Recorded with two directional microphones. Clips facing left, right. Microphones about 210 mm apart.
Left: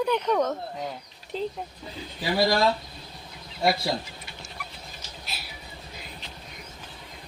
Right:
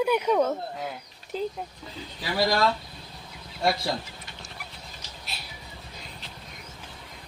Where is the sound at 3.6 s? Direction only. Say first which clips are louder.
Left 1 dB; 5° left (ahead or behind).